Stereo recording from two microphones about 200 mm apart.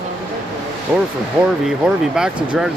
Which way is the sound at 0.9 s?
10° right (ahead or behind).